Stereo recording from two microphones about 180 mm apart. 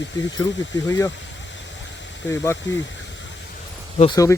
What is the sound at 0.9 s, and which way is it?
Speech, 15° left (ahead or behind).